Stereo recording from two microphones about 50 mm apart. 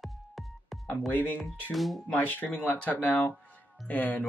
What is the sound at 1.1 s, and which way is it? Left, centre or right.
Speech, left.